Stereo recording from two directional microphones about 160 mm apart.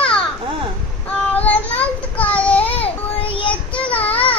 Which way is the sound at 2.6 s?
35° left (ahead or behind).